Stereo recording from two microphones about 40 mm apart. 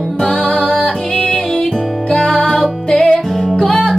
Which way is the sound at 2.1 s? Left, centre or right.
Left.